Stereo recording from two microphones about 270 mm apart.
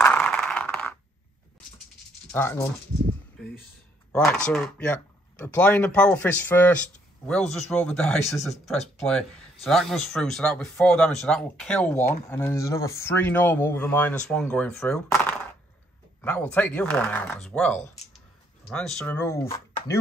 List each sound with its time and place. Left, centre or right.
0.0 s a sound: centre
2.3 s speech: centre
4.1 s speech: centre
17.7 s speech: left
18.7 s speech: centre